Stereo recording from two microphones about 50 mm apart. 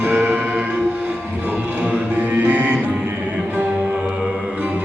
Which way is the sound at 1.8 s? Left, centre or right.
Right.